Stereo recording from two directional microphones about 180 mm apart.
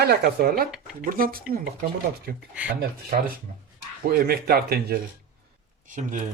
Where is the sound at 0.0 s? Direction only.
65° right (ahead or behind).